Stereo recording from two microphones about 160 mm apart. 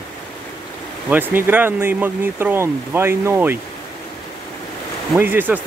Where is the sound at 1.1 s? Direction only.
10° right (ahead or behind).